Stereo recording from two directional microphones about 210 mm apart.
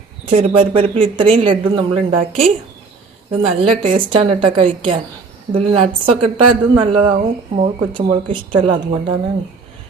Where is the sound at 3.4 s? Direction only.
25° right (ahead or behind).